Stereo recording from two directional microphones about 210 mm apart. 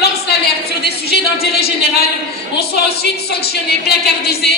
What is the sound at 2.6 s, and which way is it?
A woman's voice, 50° left (ahead or behind).